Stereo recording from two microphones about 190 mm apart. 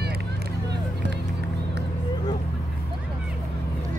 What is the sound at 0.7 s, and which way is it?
Vehicle, 65° right (ahead or behind).